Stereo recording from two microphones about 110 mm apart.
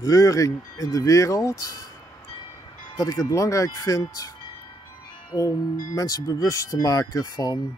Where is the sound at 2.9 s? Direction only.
30° left (ahead or behind).